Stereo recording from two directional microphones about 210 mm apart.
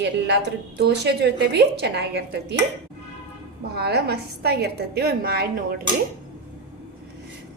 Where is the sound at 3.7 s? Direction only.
50° right (ahead or behind).